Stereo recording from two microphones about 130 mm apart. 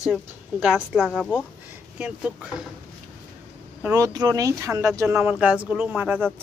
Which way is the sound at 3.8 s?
25° right (ahead or behind).